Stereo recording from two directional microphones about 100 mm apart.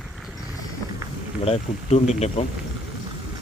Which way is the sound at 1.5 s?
90° left.